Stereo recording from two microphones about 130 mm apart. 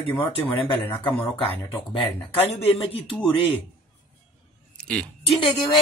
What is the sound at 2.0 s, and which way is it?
Speech, 45° left (ahead or behind).